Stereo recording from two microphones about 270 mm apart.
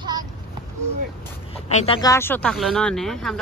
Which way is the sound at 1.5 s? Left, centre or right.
Left.